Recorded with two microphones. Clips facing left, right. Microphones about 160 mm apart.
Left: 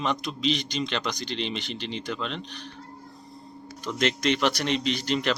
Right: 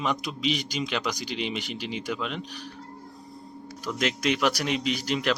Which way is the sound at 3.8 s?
5° right (ahead or behind).